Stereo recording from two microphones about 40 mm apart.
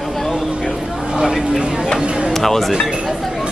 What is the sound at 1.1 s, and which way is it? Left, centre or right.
Speech, centre.